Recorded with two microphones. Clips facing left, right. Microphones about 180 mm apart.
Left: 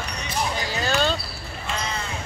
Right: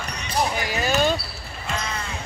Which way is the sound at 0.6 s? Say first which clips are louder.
Even; 15° right (ahead or behind).